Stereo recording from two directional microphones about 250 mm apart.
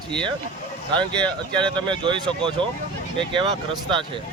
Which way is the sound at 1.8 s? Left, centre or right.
Centre.